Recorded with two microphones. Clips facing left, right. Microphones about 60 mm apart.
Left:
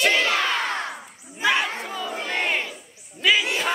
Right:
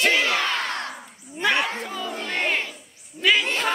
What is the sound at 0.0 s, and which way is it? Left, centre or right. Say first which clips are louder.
Battle cry: even; centre.